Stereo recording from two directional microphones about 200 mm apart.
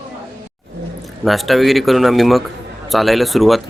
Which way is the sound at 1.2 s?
Centre (ahead or behind).